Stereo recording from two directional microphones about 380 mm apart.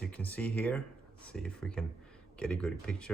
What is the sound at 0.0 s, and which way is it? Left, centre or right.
Speech, centre.